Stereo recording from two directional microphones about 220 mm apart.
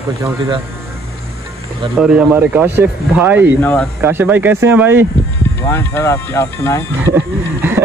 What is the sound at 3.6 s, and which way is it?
Speech, 5° left (ahead or behind).